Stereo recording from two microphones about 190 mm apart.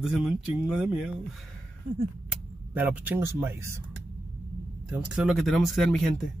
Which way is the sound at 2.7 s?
10° right (ahead or behind).